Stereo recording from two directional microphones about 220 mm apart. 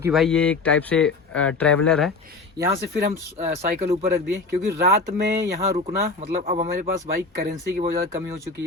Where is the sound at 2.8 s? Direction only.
45° right (ahead or behind).